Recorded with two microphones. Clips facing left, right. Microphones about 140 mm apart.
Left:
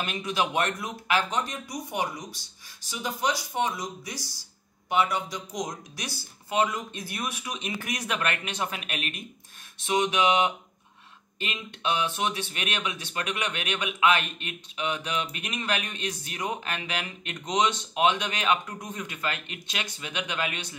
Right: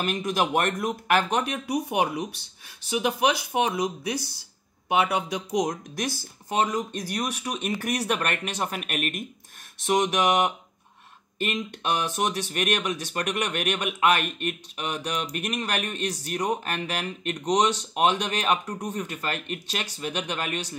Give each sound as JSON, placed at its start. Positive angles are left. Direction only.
{"t": 0.0, "sound": "mantra", "side_deg": -45}
{"t": 0.6, "sound": "speech", "side_deg": -50}
{"t": 5.7, "sound": "speech", "side_deg": -50}
{"t": 9.8, "sound": "mantra", "side_deg": -45}
{"t": 11.3, "sound": "speech", "side_deg": -45}